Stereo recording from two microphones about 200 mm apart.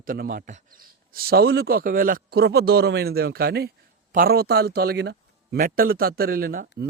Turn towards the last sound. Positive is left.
turn(degrees=-45)  # may be behind; listen again after turning